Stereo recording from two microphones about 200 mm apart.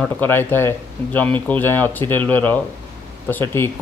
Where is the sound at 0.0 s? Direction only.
10° left (ahead or behind).